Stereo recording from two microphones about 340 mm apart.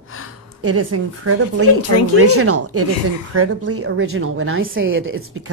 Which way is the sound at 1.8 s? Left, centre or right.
Left.